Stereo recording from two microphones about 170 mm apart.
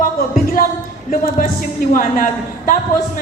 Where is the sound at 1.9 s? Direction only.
55° left (ahead or behind).